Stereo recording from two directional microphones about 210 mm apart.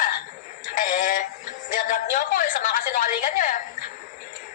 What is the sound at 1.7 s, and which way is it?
A woman's voice, 40° left (ahead or behind).